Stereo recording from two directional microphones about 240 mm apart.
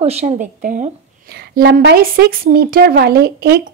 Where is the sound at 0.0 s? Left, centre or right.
Right.